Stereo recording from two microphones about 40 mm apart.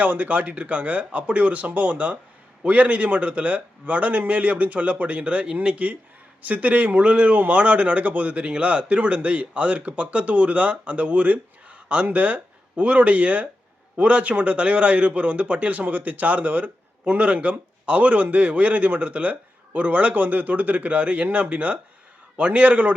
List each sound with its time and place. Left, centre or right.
0.0 s a man's voice: right
17.1 s a man's voice: right